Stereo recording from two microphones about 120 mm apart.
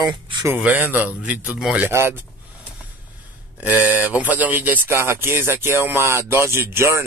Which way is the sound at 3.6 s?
15° right (ahead or behind).